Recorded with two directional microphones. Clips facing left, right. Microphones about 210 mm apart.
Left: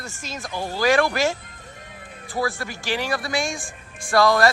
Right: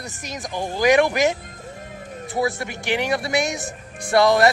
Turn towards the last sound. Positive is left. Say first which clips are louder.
# right 2 dB
turn(degrees=-20)  # may be behind; listen again after turning